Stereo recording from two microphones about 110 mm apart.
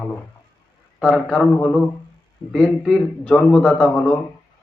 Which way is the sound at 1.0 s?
5° left (ahead or behind).